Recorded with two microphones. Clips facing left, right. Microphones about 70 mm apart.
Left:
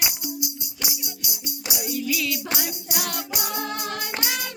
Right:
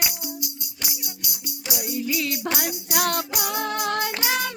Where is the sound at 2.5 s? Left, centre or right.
Right.